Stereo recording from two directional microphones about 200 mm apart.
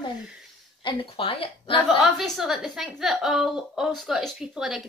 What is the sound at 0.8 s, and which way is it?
A woman's voice, 25° left (ahead or behind).